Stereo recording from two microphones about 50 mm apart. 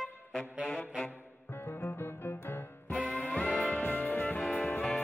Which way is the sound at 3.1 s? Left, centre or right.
Left.